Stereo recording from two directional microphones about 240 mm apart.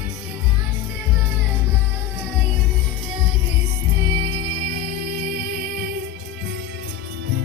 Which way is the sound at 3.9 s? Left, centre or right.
Right.